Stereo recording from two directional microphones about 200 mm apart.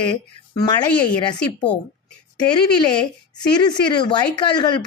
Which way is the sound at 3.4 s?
20° left (ahead or behind).